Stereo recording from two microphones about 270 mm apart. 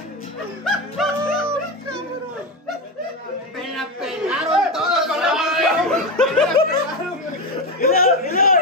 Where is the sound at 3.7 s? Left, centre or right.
Centre.